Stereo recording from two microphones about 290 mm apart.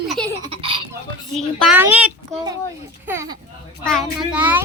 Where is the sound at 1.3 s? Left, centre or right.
Centre.